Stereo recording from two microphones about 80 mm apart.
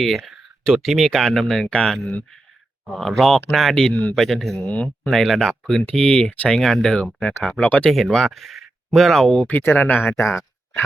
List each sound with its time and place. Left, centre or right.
0.0 s speech: centre
2.8 s speech: centre
8.1 s speech: centre
9.5 s speech: left